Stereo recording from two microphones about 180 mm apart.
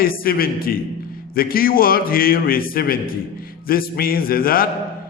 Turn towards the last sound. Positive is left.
turn(degrees=55)  # may be behind; listen again after turning